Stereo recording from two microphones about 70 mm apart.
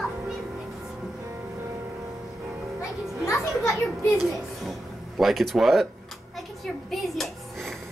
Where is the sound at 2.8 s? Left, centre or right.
Left.